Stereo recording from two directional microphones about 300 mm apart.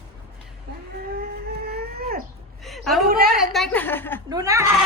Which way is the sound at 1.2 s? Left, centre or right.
Right.